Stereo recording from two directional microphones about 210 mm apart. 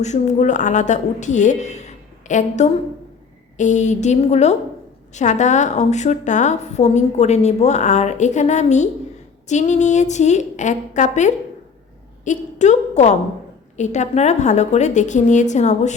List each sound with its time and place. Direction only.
0.0 s a woman's voice: 35° left (ahead or behind)